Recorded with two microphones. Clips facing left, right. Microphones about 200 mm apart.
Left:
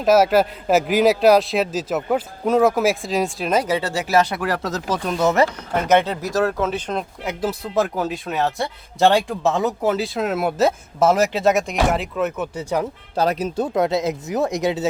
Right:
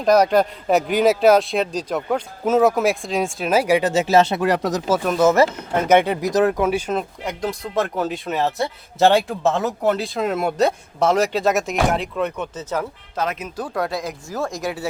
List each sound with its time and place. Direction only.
0.0 s speech: 5° left (ahead or behind); by 4.8 s 20° right (ahead or behind)
4.9 s speech: 5° right (ahead or behind)
12.5 s speech: 15° left (ahead or behind)
13.1 s speech: 35° left (ahead or behind)
13.7 s speech: 20° left (ahead or behind)